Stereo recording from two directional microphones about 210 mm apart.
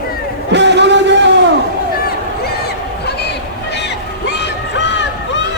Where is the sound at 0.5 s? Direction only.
55° right (ahead or behind).